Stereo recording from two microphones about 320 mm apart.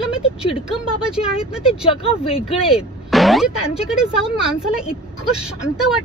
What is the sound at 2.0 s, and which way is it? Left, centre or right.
Speech, centre.